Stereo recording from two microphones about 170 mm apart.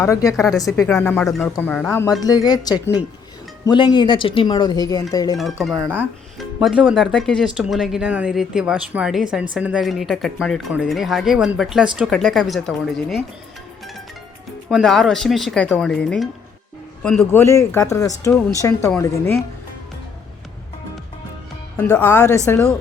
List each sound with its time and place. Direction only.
0.0 s speech: 20° left (ahead or behind)
0.9 s speech: 10° left (ahead or behind)
1.9 s speech: 20° left (ahead or behind)
5.6 s speech: centre (ahead or behind)
14.7 s speech: centre (ahead or behind)
17.4 s speech: 15° left (ahead or behind)
21.8 s speech: 10° left (ahead or behind)